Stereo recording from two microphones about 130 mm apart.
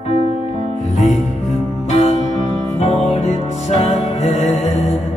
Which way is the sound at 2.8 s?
60° left (ahead or behind).